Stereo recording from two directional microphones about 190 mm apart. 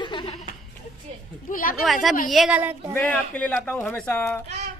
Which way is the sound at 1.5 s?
45° left (ahead or behind).